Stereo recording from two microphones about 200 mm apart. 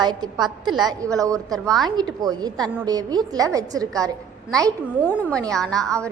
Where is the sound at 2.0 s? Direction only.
20° right (ahead or behind).